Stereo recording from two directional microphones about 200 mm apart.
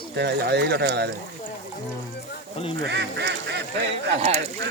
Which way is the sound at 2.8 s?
60° right (ahead or behind).